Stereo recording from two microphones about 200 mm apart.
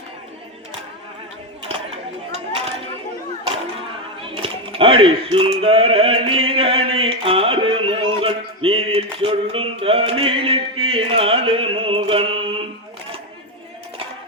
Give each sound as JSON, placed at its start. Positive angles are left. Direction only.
{"t": 1.6, "sound": "chatter", "side_deg": -30}
{"t": 4.4, "sound": "speech", "side_deg": -25}
{"t": 10.8, "sound": "music", "side_deg": -30}